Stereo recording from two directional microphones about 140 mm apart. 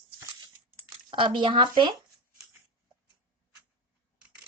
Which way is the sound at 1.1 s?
35° right (ahead or behind).